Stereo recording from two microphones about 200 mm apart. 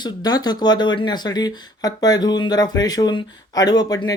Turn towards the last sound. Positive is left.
turn(degrees=20)  # may be behind; listen again after turning